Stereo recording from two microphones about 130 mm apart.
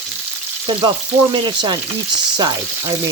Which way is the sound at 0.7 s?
35° right (ahead or behind).